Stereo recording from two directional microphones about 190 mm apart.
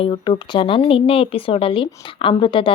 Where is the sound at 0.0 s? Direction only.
25° left (ahead or behind).